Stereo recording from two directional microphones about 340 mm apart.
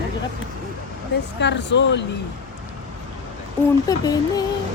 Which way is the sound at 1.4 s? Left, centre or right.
Left.